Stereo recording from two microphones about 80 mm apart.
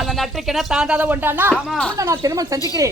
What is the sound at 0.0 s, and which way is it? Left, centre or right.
Speech, centre.